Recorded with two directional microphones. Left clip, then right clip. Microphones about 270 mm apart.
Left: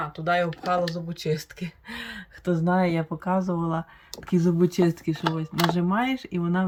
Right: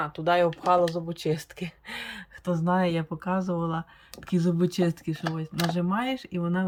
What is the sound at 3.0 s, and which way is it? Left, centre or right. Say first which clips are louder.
Speech: left 3 dB; right.